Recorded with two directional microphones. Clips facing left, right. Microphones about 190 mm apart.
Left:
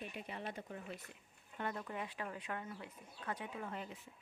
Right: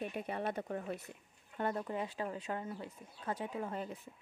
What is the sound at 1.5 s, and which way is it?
Speech, 35° right (ahead or behind).